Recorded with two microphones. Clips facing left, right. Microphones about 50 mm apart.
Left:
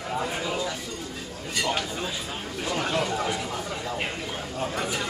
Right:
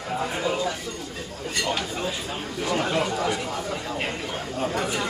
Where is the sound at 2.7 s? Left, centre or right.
Centre.